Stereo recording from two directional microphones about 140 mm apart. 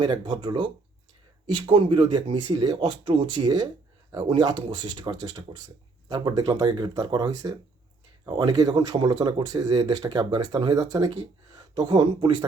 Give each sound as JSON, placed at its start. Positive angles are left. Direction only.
{"t": 0.0, "sound": "speech", "side_deg": -35}